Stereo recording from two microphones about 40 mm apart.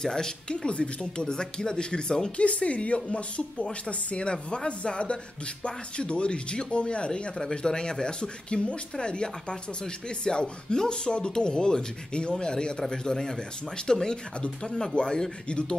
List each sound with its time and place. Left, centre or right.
0.0 s speech: centre
2.3 s speech: left